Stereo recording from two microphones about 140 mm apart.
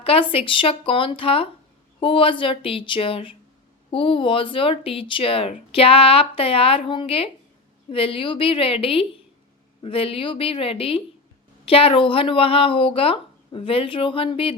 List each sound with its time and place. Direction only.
0.0 s speech: 40° left (ahead or behind)